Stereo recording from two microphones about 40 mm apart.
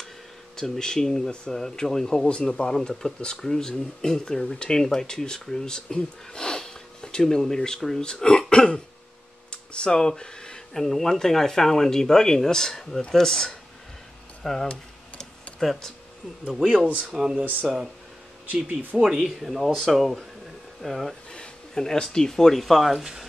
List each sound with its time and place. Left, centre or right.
0.6 s speech: centre
9.5 s a sound: left
10.7 s speech: centre
16.6 s speech: right
17.1 s speech: centre
18.5 s speech: right
18.9 s speech: centre
21.3 s speech: centre